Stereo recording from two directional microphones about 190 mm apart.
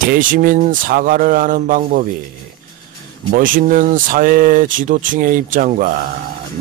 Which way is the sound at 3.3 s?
45° right (ahead or behind).